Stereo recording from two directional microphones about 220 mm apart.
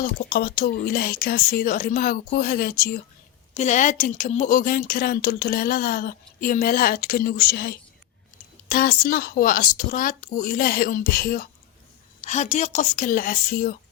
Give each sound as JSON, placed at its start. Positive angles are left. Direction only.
{"t": 0.0, "sound": "speech", "side_deg": 45}
{"t": 3.5, "sound": "speech", "side_deg": 30}
{"t": 12.2, "sound": "speech", "side_deg": 30}